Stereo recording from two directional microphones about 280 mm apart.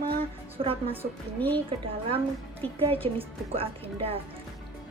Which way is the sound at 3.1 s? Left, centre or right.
Centre.